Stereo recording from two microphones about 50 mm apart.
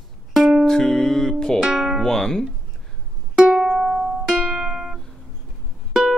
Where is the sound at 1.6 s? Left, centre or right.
Centre.